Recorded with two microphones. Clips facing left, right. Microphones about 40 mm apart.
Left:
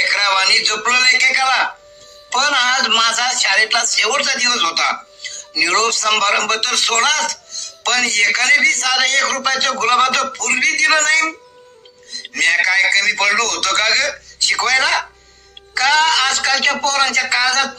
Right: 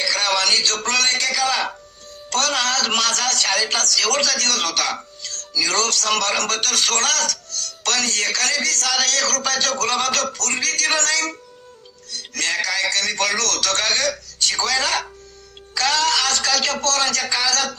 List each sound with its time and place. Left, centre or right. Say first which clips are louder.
0.0 s a man's voice: left 5 dB; left